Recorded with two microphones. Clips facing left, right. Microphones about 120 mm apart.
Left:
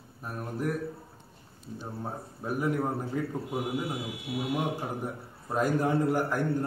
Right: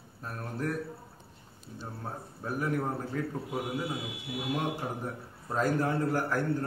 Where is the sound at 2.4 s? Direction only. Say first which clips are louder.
Left 2 dB; 15° left (ahead or behind).